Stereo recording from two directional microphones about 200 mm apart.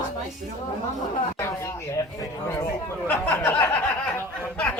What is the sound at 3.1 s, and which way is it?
Speech, 10° left (ahead or behind).